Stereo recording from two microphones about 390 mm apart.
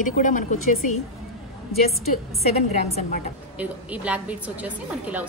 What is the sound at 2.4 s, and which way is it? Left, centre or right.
Speech, centre.